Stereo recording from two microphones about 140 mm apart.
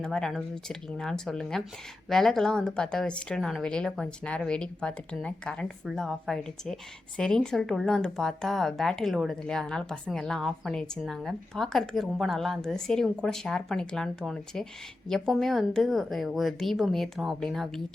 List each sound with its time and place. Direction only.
0.0 s speech: 5° left (ahead or behind)